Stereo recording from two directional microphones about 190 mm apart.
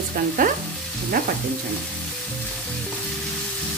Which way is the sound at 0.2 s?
50° right (ahead or behind).